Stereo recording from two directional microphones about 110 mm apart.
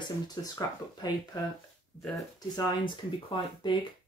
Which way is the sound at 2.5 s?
45° left (ahead or behind).